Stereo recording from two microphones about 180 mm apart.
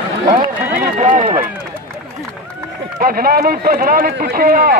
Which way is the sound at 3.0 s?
55° right (ahead or behind).